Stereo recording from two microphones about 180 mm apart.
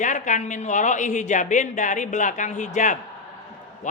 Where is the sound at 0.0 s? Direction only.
45° left (ahead or behind).